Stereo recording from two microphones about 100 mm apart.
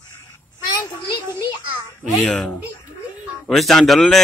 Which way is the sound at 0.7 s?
45° left (ahead or behind).